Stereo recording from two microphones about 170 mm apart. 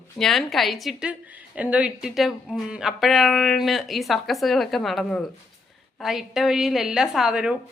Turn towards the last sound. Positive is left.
turn(degrees=-5)  # may be behind; listen again after turning